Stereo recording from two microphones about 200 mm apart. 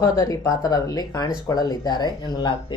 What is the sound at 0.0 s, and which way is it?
Speech, 15° left (ahead or behind).